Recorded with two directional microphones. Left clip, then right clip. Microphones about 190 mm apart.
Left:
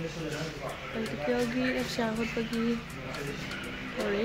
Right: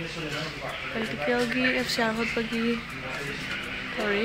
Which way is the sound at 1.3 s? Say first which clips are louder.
Right 6 dB; 10° right (ahead or behind).